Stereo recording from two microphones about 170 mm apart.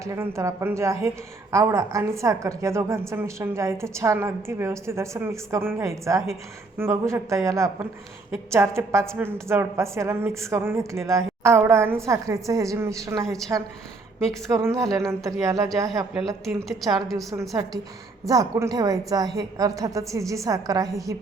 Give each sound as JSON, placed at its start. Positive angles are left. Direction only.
{"t": 0.0, "sound": "a woman's voice", "side_deg": -15}
{"t": 14.4, "sound": "a woman's voice", "side_deg": -20}
{"t": 16.1, "sound": "a woman's voice", "side_deg": 0}
{"t": 17.5, "sound": "a woman's voice", "side_deg": -20}